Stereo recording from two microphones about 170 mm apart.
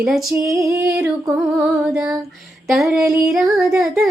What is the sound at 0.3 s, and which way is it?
Female singing, 20° right (ahead or behind).